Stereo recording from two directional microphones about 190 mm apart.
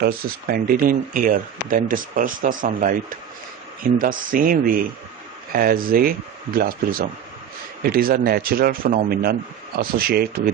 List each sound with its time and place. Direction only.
0.0 s speech: 50° right (ahead or behind)
7.9 s speech: 50° right (ahead or behind)